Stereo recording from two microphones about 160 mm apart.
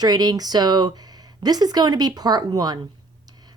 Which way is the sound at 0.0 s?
25° right (ahead or behind).